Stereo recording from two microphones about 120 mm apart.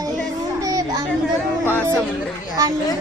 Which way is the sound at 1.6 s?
15° left (ahead or behind).